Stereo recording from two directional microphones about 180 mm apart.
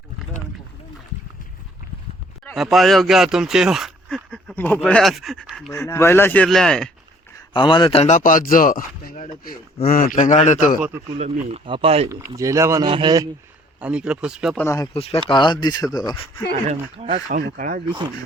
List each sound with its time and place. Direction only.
2.4 s speech: centre (ahead or behind)
5.7 s speech: 15° left (ahead or behind)
7.3 s a man's voice: 25° left (ahead or behind); by 10.8 s 40° left (ahead or behind)
11.2 s speech: 30° right (ahead or behind)
12.4 s a man's voice: 15° right (ahead or behind)
13.7 s speech: 5° right (ahead or behind)
14.6 s speech: 15° left (ahead or behind)
14.9 s speech: 35° left (ahead or behind)
16.6 s speech: 35° right (ahead or behind)
17.3 s speech: 50° right (ahead or behind)
17.8 s a man's voice: 25° right (ahead or behind)